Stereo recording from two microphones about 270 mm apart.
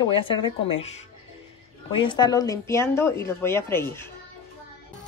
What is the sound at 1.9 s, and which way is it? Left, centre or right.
A woman's voice, centre.